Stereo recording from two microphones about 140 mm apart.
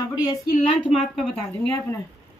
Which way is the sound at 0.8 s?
10° right (ahead or behind).